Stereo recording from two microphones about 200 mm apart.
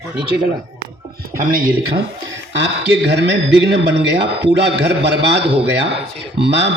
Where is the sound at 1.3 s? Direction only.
45° right (ahead or behind).